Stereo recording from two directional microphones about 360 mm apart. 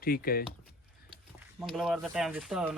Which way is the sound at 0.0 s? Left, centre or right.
Left.